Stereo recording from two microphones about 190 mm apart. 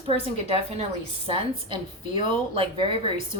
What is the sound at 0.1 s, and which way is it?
A woman's voice, 30° right (ahead or behind).